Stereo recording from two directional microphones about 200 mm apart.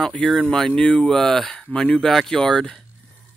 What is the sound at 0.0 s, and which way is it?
Speech, 5° left (ahead or behind).